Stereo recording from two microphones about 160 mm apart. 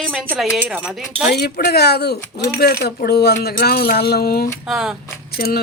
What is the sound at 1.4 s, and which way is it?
Speech, 85° left.